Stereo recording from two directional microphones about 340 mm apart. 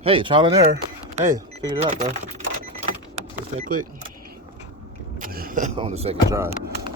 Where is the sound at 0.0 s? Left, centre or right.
Centre.